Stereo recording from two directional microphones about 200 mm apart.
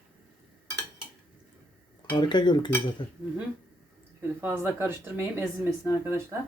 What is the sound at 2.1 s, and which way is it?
Cutlery, 20° left (ahead or behind).